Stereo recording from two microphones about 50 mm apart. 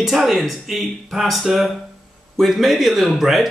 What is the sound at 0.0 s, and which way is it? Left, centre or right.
Speech, centre.